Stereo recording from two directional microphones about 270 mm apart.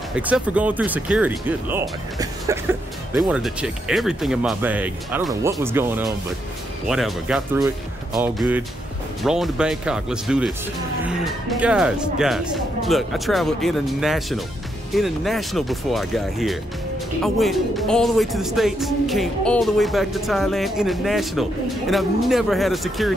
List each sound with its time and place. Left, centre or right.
0.1 s speech: centre